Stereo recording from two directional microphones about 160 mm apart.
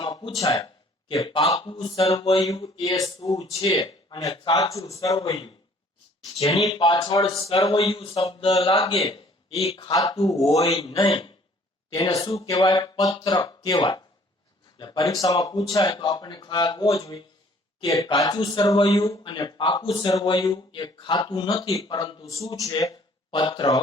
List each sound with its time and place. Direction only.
0.0 s speech: 30° left (ahead or behind)
2.4 s speech: 25° left (ahead or behind)
3.3 s speech: 35° left (ahead or behind)
3.8 s speech: 25° left (ahead or behind)
5.2 s speech: 35° left (ahead or behind)
9.9 s speech: 20° left (ahead or behind)
10.4 s speech: 40° left (ahead or behind)
12.5 s speech: 20° left (ahead or behind)
13.1 s speech: 35° left (ahead or behind)
13.4 s speech: 25° left (ahead or behind)
22.5 s speech: 20° left (ahead or behind)